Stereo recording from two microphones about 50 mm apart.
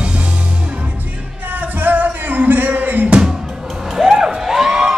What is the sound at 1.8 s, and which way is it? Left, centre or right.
Music, right.